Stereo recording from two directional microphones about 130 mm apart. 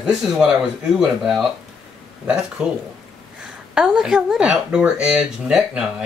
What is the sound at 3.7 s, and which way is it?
Speech, 5° right (ahead or behind).